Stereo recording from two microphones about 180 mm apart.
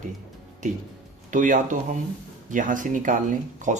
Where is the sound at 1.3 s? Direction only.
45° right (ahead or behind).